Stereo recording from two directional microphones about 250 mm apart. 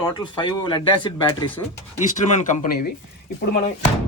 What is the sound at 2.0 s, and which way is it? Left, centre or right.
Speech, left.